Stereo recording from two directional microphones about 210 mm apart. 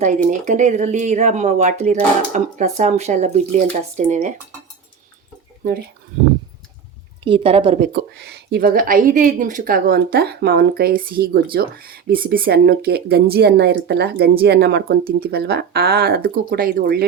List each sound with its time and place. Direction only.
0.0 s speech: 35° right (ahead or behind)
7.3 s a woman's voice: 25° right (ahead or behind)
7.9 s speech: 50° right (ahead or behind)